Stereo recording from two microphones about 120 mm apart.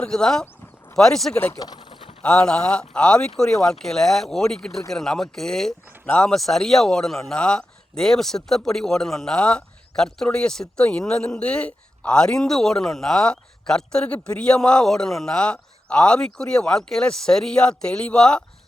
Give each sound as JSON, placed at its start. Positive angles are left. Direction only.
{"t": 0.0, "sound": "speech", "side_deg": 5}
{"t": 1.5, "sound": "a sound", "side_deg": 35}
{"t": 2.2, "sound": "speech", "side_deg": 10}